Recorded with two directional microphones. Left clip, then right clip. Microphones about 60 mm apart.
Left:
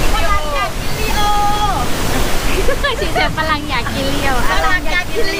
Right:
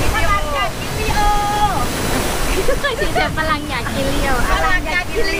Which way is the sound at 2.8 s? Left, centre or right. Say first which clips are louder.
Left 2 dB; left.